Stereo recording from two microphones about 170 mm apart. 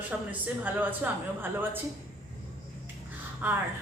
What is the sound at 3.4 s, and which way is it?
Speech, 10° right (ahead or behind).